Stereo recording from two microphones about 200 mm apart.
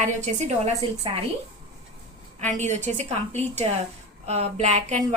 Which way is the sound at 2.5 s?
35° right (ahead or behind).